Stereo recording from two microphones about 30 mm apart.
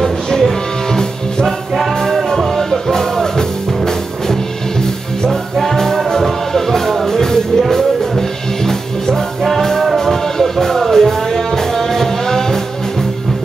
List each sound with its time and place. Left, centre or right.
0.0 s music: centre
2.1 s music: centre